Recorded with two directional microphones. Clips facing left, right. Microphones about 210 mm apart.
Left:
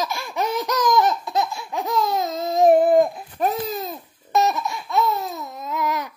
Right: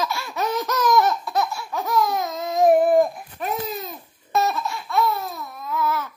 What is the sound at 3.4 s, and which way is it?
Babbling, 35° left (ahead or behind).